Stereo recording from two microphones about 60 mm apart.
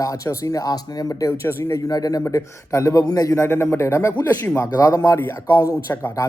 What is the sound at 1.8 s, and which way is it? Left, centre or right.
Speech, left.